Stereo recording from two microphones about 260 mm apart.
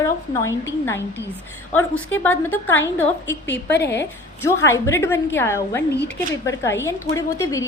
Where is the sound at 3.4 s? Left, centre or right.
Left.